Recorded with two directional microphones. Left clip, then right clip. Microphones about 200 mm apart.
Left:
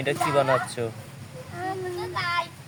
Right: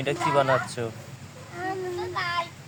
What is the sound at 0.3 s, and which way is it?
Speech, 10° left (ahead or behind).